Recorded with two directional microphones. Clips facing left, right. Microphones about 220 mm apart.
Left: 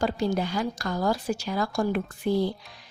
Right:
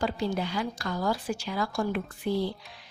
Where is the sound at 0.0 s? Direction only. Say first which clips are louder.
Left 3 dB; 45° left (ahead or behind).